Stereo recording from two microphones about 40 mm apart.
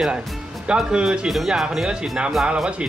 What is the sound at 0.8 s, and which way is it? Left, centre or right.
Speech, centre.